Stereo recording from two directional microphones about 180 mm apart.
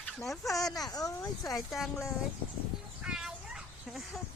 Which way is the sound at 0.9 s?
20° left (ahead or behind).